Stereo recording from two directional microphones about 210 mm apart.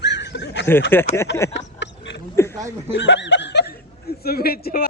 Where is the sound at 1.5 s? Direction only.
55° left (ahead or behind).